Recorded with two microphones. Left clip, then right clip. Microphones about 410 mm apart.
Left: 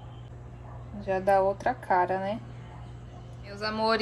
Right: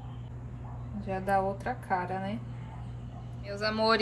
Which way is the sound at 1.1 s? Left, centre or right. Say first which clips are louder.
Left 5 dB; centre.